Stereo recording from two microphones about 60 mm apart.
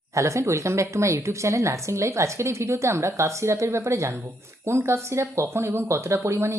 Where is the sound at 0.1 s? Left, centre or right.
Right.